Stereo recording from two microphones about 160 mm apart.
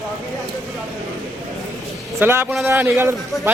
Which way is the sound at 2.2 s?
15° right (ahead or behind).